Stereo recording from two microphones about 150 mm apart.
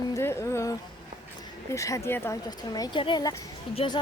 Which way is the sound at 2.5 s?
25° left (ahead or behind).